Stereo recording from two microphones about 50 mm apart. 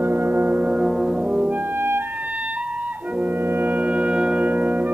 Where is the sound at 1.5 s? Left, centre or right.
Right.